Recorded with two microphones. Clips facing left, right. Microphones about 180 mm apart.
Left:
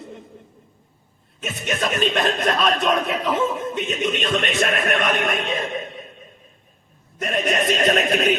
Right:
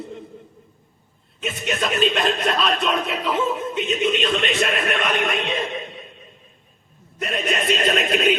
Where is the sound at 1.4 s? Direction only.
45° left (ahead or behind).